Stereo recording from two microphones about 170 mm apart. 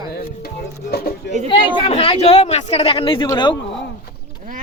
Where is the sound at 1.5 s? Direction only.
35° left (ahead or behind).